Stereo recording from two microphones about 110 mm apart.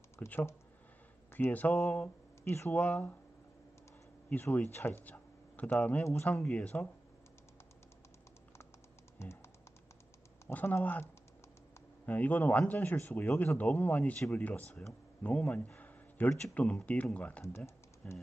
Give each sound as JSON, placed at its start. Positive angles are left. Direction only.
{"t": 0.2, "sound": "speech", "side_deg": 20}
{"t": 4.3, "sound": "speech", "side_deg": 20}
{"t": 10.4, "sound": "speech", "side_deg": 15}
{"t": 12.1, "sound": "speech", "side_deg": 15}